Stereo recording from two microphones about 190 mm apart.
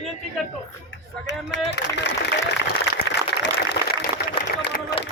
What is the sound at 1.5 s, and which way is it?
Speech, 65° left (ahead or behind).